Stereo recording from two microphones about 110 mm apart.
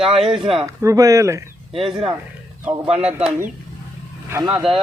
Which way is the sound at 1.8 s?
50° right (ahead or behind).